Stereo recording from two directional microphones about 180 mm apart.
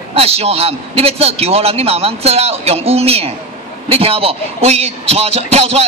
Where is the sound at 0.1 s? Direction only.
35° right (ahead or behind).